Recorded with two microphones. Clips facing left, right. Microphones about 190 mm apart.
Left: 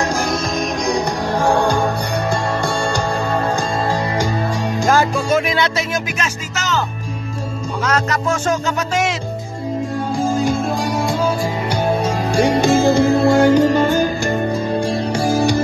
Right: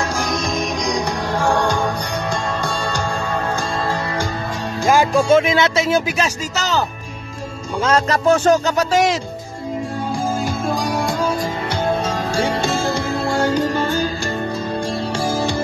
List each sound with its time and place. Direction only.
0.0 s music: 10° left (ahead or behind)
5.3 s music: 20° right (ahead or behind)
5.9 s speech: 30° right (ahead or behind)
7.8 s speech: 30° right (ahead or behind)
10.4 s music: centre (ahead or behind)
11.7 s music: 10° left (ahead or behind)